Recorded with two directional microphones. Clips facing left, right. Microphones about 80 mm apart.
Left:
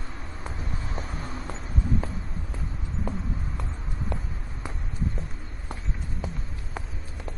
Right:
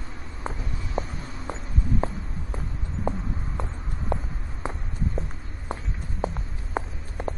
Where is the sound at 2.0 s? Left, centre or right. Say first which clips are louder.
Right 6 dB; right.